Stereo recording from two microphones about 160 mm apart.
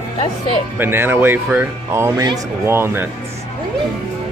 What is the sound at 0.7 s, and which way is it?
Speech, 15° right (ahead or behind).